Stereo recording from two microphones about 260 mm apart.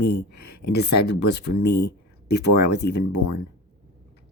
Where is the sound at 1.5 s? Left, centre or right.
Left.